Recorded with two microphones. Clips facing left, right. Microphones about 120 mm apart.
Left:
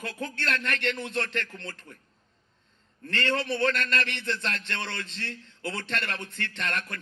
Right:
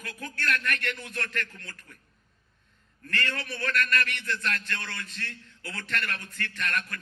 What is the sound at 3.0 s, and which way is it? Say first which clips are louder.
A man's voice: left 5 dB; 25° left (ahead or behind).